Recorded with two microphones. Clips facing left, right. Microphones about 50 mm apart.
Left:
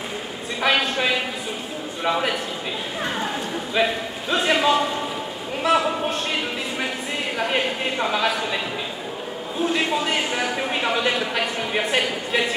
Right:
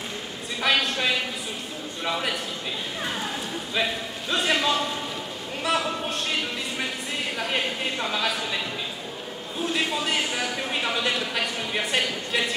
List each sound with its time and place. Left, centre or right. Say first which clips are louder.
0.6 s a sound: left 3 dB; centre
2.0 s a man's voice: left 5 dB; centre
3.7 s a man's voice: left 5 dB; centre
6.0 s a sound: left 3 dB; centre
7.3 s a man's voice: left 5 dB; centre
9.6 s a man's voice: left 4 dB; centre